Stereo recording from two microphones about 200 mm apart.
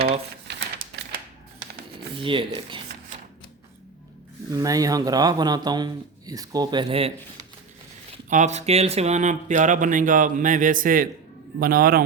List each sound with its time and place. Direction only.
0.9 s a sound: 60° right (ahead or behind)
2.1 s speech: 25° right (ahead or behind)
4.5 s speech: 15° right (ahead or behind)
8.3 s a man's voice: 35° right (ahead or behind)